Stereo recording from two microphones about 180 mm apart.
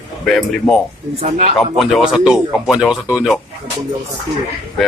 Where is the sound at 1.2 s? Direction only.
35° right (ahead or behind).